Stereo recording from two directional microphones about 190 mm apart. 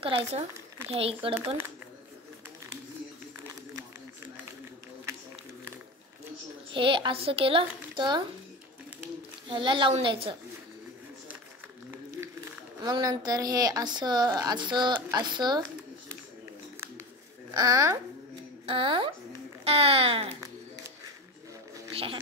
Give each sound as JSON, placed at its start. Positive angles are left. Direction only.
{"t": 0.0, "sound": "speech", "side_deg": -30}
{"t": 6.7, "sound": "a woman's voice", "side_deg": -25}
{"t": 9.5, "sound": "a woman's voice", "side_deg": -25}
{"t": 11.9, "sound": "a woman's voice", "side_deg": -15}
{"t": 17.6, "sound": "a woman's voice", "side_deg": -15}
{"t": 21.9, "sound": "a sound", "side_deg": -30}